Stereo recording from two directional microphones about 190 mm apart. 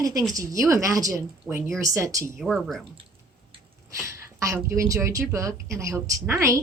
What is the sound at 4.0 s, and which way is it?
A woman's voice, 15° right (ahead or behind).